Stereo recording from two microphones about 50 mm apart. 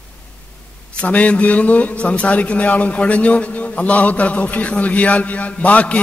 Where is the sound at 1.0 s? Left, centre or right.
Left.